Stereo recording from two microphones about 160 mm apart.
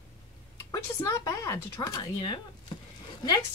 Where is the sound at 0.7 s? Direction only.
20° left (ahead or behind).